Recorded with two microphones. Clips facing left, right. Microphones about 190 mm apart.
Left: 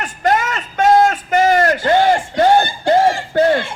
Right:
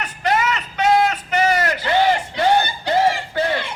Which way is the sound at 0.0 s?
45° left (ahead or behind).